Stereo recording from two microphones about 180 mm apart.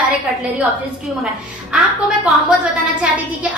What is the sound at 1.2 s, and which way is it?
A woman's voice, 5° right (ahead or behind).